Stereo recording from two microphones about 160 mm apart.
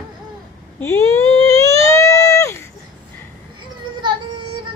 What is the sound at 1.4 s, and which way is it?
Baby cry, 20° left (ahead or behind).